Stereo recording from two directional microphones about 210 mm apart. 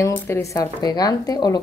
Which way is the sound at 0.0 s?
15° left (ahead or behind).